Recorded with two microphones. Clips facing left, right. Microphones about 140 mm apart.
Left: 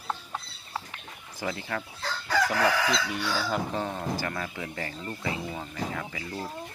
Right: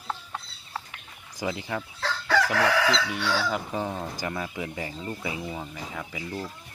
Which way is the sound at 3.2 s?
75° right (ahead or behind).